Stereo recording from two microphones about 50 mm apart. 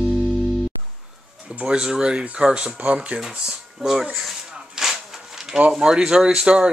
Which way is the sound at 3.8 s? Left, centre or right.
Centre.